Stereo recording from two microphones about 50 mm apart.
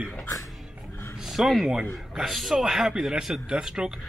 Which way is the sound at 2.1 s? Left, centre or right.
Centre.